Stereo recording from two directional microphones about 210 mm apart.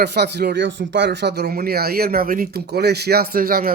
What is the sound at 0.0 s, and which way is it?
Speech, 50° right (ahead or behind).